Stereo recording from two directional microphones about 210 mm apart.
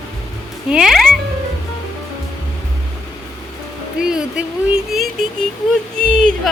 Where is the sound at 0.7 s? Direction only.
5° right (ahead or behind).